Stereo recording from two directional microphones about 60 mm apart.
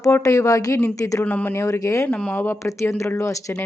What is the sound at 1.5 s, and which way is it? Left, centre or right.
Speech, left.